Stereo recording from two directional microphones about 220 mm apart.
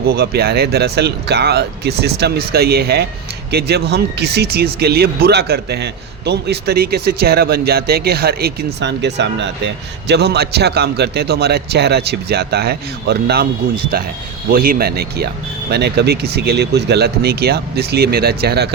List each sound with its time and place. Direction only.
0.1 s speech: 45° right (ahead or behind)